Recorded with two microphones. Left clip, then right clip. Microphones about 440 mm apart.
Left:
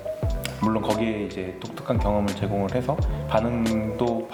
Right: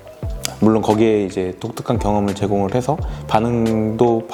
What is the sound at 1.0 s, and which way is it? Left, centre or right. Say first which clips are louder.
Speech: right 12 dB; right.